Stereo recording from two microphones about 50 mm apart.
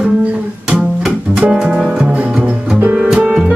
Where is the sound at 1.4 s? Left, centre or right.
Centre.